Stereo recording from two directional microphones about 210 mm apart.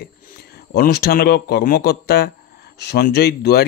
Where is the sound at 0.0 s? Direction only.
45° left (ahead or behind).